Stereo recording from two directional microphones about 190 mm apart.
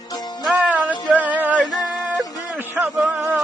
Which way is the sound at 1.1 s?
10° right (ahead or behind).